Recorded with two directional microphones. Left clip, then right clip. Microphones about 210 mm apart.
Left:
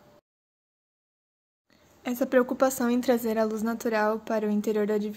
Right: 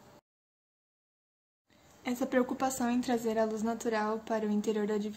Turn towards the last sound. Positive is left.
turn(degrees=30)  # may be behind; listen again after turning